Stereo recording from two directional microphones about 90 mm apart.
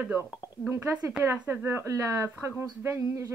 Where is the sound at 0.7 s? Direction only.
25° right (ahead or behind).